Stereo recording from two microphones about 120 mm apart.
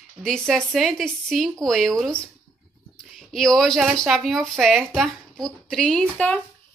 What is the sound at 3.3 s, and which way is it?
Speech, 5° left (ahead or behind).